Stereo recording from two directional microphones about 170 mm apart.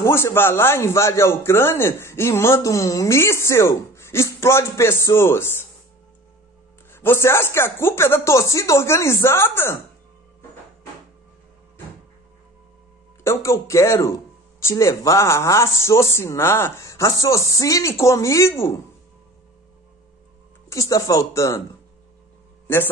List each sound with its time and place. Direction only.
0.0 s a man's voice: 15° left (ahead or behind)
6.9 s a man's voice: 15° left (ahead or behind)
13.2 s a man's voice: 15° left (ahead or behind)
20.7 s speech: 20° left (ahead or behind)